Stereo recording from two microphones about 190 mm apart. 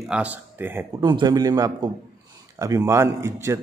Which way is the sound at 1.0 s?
20° right (ahead or behind).